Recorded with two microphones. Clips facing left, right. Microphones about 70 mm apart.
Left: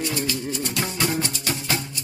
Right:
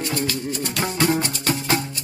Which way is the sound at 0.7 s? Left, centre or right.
Right.